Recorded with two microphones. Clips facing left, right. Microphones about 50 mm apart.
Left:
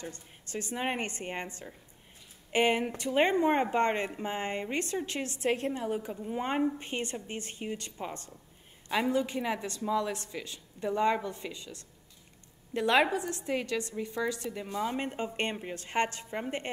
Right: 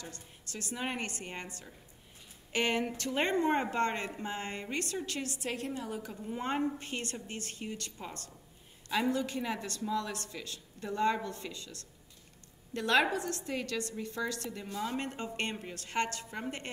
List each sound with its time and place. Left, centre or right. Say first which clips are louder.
0.0 s a woman's voice: left 4 dB; left
6.2 s speech: left 2 dB; centre